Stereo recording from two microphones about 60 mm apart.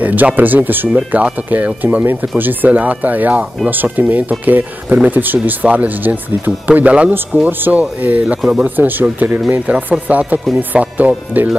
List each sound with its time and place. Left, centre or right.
0.0 s speech: right
8.4 s speech: centre
8.6 s speech: right